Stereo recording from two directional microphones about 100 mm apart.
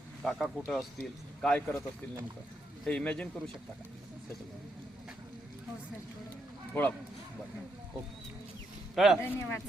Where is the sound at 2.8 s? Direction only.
10° left (ahead or behind).